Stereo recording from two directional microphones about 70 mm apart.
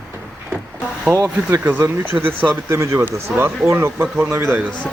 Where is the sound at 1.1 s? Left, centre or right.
Right.